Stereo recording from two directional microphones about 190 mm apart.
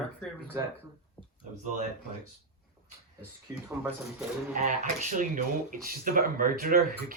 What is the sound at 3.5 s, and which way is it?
Speech, 5° right (ahead or behind).